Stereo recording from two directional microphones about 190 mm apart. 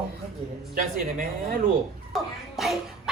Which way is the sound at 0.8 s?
45° right (ahead or behind).